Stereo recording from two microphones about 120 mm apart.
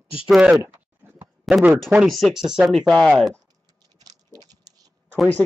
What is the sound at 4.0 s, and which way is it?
Typing, 35° right (ahead or behind).